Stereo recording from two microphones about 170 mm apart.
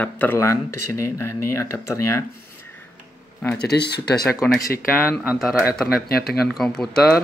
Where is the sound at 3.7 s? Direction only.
75° left (ahead or behind).